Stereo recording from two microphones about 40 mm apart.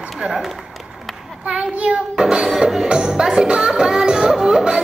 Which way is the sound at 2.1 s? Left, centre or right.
Centre.